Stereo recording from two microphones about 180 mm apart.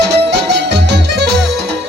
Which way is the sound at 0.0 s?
70° right (ahead or behind).